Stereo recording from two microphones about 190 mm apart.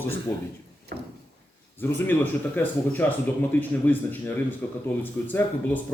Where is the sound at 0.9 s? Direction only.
50° right (ahead or behind).